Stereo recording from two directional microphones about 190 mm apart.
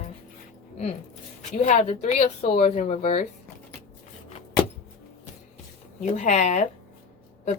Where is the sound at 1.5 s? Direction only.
40° left (ahead or behind).